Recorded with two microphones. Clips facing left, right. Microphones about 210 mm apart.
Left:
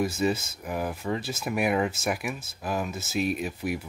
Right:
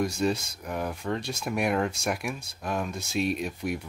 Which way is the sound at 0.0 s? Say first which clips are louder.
Left 1 dB; 5° left (ahead or behind).